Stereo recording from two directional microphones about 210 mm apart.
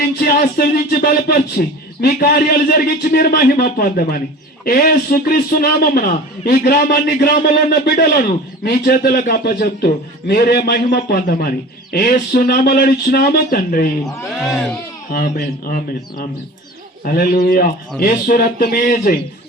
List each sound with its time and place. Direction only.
0.0 s a man's voice: 45° left (ahead or behind)
14.4 s a man's voice: centre (ahead or behind)
15.1 s a man's voice: 45° left (ahead or behind)